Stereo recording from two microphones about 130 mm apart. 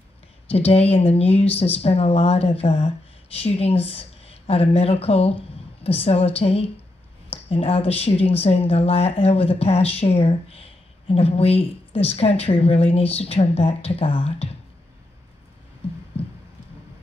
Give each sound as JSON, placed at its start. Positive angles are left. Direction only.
{"t": 0.5, "sound": "speech", "side_deg": 50}